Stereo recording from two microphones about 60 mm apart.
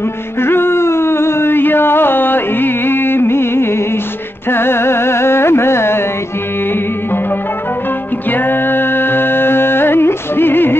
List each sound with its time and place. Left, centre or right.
0.4 s a sound: left
4.5 s carnatic music: left
8.3 s music: left